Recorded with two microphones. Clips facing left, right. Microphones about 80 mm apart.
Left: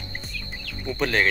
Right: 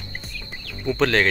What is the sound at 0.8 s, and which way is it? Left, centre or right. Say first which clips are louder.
Speech: right 4 dB; right.